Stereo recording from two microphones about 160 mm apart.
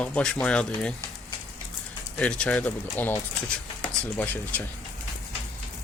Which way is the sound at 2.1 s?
5° left (ahead or behind).